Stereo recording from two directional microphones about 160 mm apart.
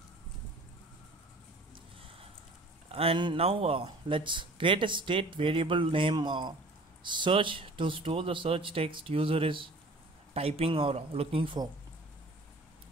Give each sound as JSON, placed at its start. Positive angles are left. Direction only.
{"t": 2.9, "sound": "speech", "side_deg": -35}